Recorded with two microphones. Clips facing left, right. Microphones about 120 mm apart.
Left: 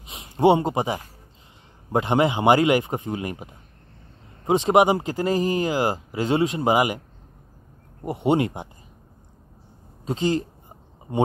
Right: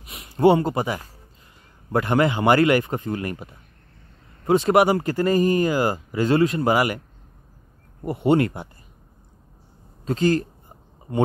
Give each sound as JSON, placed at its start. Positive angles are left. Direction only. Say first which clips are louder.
{"t": 0.0, "sound": "a sound", "louder": "even", "side_deg": 25}
{"t": 0.4, "sound": "speech", "louder": "right 1 dB", "side_deg": 15}
{"t": 8.0, "sound": "speech", "louder": "right 2 dB", "side_deg": 15}
{"t": 10.0, "sound": "speech", "louder": "right 3 dB", "side_deg": 20}